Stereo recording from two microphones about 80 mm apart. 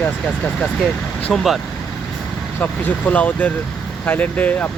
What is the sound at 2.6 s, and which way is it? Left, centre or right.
Speech, centre.